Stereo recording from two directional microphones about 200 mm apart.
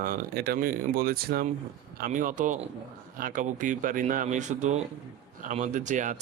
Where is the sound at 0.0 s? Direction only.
45° right (ahead or behind).